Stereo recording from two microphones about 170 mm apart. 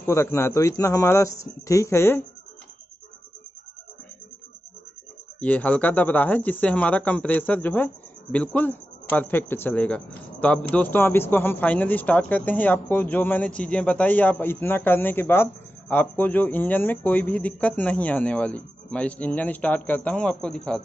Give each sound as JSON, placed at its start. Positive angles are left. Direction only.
{"t": 0.0, "sound": "speech", "side_deg": 15}
{"t": 5.4, "sound": "speech", "side_deg": 10}